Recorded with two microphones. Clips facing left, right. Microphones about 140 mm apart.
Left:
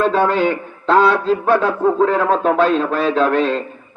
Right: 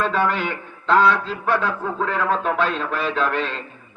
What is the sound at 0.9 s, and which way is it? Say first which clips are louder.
A man's voice: left 4 dB; 15° left (ahead or behind).